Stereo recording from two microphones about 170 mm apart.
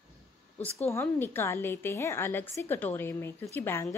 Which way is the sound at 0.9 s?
15° left (ahead or behind).